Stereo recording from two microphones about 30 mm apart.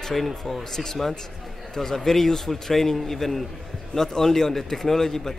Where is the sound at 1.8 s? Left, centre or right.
Centre.